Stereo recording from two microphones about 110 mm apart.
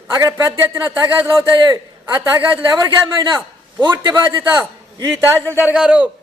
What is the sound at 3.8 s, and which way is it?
Speech, 45° right (ahead or behind).